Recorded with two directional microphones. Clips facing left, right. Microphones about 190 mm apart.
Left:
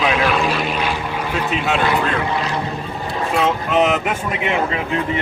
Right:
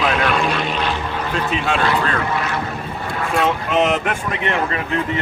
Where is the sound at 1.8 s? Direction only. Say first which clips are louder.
Left 1 dB; 15° left (ahead or behind).